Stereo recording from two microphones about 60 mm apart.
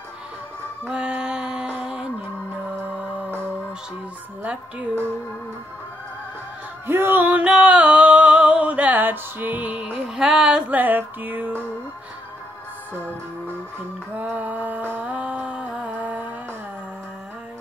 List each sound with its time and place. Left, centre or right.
0.8 s music: centre
4.4 s a woman's voice: right
6.9 s music: right
7.4 s music: centre
9.9 s music: centre
10.7 s music: right
14.2 s music: right